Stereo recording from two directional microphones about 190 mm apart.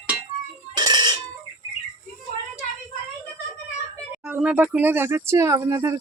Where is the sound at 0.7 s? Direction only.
20° right (ahead or behind).